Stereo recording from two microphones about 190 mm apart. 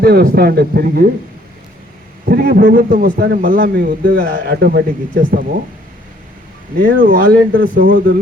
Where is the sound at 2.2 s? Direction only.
50° right (ahead or behind).